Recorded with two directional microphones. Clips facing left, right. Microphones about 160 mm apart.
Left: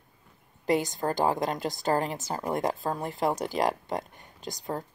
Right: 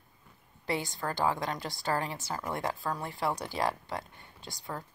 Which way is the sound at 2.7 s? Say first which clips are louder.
Left 4 dB; 20° left (ahead or behind).